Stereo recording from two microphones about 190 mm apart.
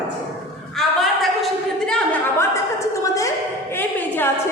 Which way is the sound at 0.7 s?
Centre (ahead or behind).